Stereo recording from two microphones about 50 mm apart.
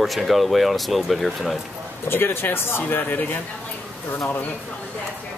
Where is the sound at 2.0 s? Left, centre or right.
Left.